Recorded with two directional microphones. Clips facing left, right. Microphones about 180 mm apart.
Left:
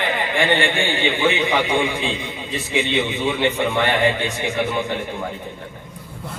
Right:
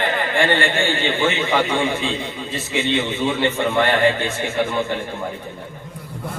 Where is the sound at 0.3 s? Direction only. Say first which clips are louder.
Even; 15° left (ahead or behind).